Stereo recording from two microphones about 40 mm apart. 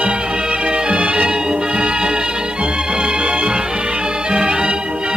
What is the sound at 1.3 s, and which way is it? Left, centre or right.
Music, right.